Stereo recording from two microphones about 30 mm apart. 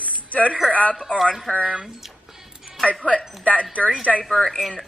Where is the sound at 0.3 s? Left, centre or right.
Left.